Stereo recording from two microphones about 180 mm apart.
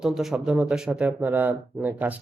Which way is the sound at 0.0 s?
Centre (ahead or behind).